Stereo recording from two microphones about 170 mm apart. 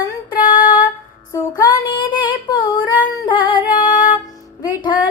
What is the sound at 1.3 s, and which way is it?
Female singing, 25° left (ahead or behind).